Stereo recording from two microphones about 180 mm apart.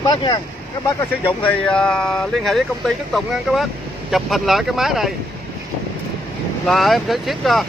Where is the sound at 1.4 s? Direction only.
5° left (ahead or behind).